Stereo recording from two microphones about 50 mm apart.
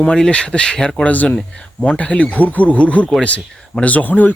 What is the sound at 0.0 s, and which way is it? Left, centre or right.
Speech, centre.